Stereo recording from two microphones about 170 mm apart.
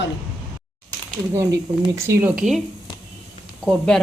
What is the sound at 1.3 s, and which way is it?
Speech, 20° right (ahead or behind).